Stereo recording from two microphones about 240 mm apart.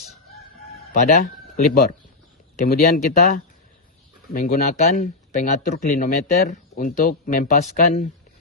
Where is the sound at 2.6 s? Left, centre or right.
Left.